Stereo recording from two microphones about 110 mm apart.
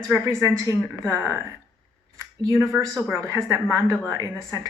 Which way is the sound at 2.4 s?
30° right (ahead or behind).